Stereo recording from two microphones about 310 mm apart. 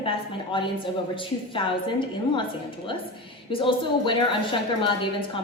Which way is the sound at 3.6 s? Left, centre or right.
Centre.